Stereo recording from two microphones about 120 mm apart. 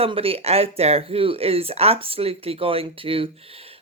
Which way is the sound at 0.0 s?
50° right (ahead or behind).